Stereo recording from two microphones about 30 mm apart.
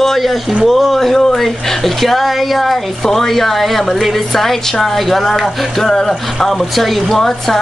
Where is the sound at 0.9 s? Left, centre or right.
Centre.